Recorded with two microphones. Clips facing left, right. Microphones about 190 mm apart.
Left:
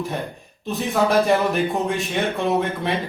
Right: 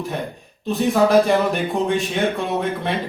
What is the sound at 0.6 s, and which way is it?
Speech, centre (ahead or behind).